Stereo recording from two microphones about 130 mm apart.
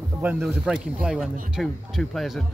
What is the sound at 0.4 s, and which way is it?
Speech, centre (ahead or behind).